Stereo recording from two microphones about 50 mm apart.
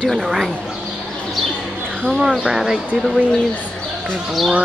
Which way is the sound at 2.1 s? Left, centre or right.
Centre.